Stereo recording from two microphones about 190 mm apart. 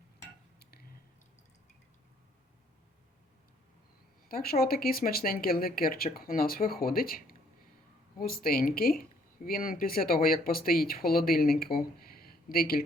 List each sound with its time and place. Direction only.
4.3 s speech: 50° left (ahead or behind)